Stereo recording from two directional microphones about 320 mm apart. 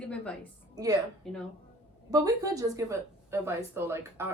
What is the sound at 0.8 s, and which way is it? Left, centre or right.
Speech, centre.